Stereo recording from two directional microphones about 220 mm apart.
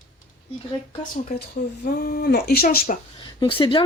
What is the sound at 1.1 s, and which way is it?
Speech, 45° left (ahead or behind).